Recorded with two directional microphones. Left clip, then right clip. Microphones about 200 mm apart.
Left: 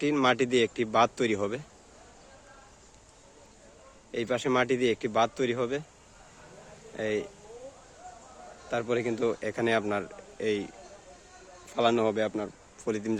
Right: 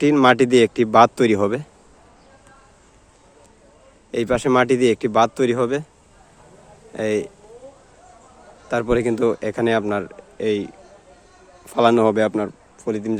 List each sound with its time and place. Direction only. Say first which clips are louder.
0.0 s a man's voice: right 11 dB; 30° right (ahead or behind)
4.1 s a man's voice: right 10 dB; 30° right (ahead or behind)
6.9 s a man's voice: right 9 dB; 30° right (ahead or behind)
8.7 s a man's voice: right 10 dB; 30° right (ahead or behind)
11.7 s a man's voice: right 10 dB; 30° right (ahead or behind)
12.8 s speech: right 7 dB; 15° right (ahead or behind)